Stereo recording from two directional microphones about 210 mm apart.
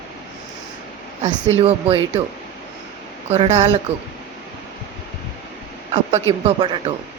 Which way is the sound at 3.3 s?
30° right (ahead or behind).